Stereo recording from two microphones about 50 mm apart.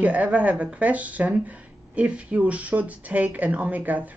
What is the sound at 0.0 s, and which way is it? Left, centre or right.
Speech, right.